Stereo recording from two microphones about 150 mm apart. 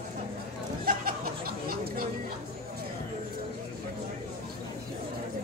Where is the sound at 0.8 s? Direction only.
75° right (ahead or behind).